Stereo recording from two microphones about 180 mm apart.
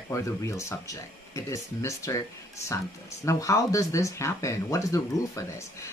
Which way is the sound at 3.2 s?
15° left (ahead or behind).